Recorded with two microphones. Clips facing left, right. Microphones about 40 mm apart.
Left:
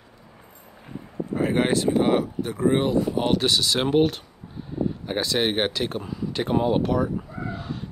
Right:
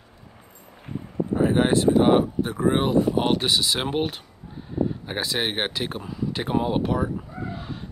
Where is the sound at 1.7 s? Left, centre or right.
Right.